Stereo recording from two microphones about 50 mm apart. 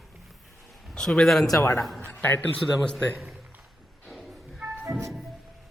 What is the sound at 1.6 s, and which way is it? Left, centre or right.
Speech, left.